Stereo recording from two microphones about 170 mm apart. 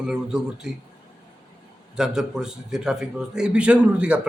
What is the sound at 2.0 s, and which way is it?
A man's voice, 5° right (ahead or behind).